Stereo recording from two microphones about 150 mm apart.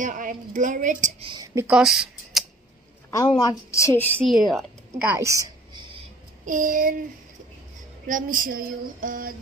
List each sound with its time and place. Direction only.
0.0 s a woman's voice: 60° right (ahead or behind)
1.2 s a woman's voice: 25° right (ahead or behind)
1.7 s speech: 5° right (ahead or behind)
3.1 s a woman's voice: 25° left (ahead or behind)
4.3 s a woman's voice: centre (ahead or behind)
5.0 s a woman's voice: 20° right (ahead or behind)
6.4 s a woman's voice: 60° right (ahead or behind)
8.1 s a sound: 65° right (ahead or behind)